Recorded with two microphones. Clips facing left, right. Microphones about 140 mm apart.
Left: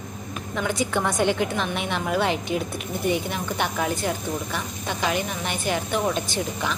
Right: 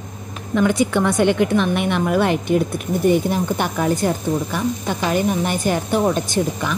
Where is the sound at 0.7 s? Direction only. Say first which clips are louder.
Right 6 dB; 65° right (ahead or behind); by 4.1 s 45° right (ahead or behind).